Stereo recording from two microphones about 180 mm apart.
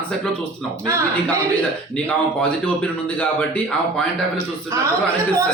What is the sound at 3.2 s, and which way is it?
A man's voice, 5° left (ahead or behind).